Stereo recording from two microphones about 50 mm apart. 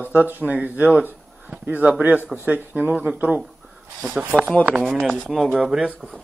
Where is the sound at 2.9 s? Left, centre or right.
Centre.